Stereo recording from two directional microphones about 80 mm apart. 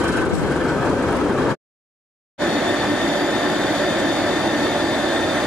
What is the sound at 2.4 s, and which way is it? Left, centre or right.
Vehicle, centre.